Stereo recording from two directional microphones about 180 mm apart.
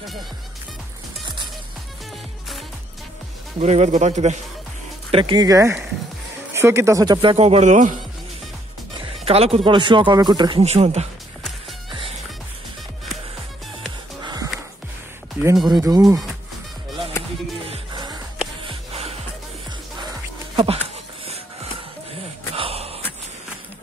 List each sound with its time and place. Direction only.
3.5 s a man's voice: 40° right (ahead or behind)
5.1 s speech: 25° right (ahead or behind); by 8.0 s 40° right (ahead or behind)
8.9 s music: 35° right (ahead or behind)
9.7 s speech: 25° right (ahead or behind)
10.6 s a man's voice: 35° right (ahead or behind)
14.2 s music: 20° right (ahead or behind)
15.4 s speech: 15° right (ahead or behind)
17.6 s music: 25° right (ahead or behind)
20.5 s dog: 30° right (ahead or behind)
22.6 s a sound: 35° right (ahead or behind)